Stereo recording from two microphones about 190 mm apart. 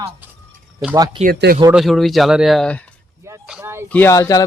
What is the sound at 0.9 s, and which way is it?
Speech, 20° right (ahead or behind).